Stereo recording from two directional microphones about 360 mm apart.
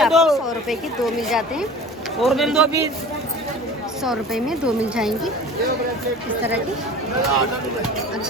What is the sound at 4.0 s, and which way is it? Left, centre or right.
A woman's voice, centre.